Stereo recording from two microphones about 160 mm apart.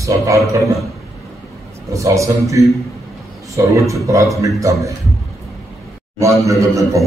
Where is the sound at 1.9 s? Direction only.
20° right (ahead or behind).